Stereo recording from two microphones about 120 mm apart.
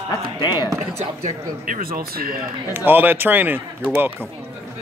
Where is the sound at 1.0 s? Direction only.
90° right.